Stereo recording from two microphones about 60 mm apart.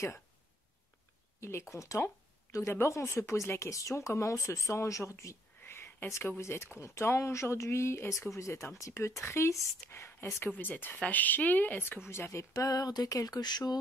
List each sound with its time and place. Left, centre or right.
1.4 s speech: left
2.7 s speech: left
5.6 s speech: left
10.6 s speech: left
12.1 s speech: left
12.5 s a sound: left